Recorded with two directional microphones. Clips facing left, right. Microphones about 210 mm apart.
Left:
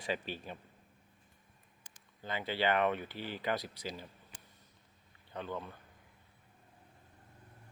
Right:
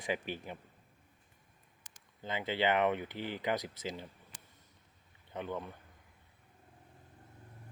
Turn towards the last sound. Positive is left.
turn(degrees=-15)  # may be behind; listen again after turning